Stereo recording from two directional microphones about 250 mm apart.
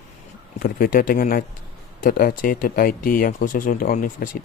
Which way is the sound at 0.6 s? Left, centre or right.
Left.